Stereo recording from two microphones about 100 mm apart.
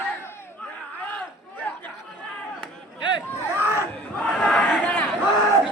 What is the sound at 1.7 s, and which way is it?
Chatter, 15° left (ahead or behind).